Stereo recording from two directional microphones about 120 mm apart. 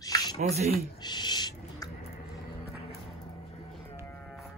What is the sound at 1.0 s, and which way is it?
Owl, 35° left (ahead or behind).